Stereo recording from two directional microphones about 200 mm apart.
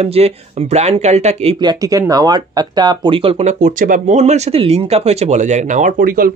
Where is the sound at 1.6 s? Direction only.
20° right (ahead or behind).